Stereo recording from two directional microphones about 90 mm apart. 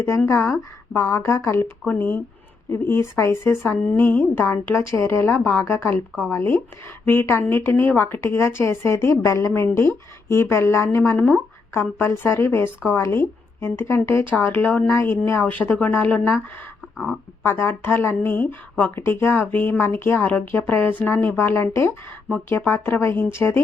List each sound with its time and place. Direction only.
0.3 s a woman's voice: 30° left (ahead or behind)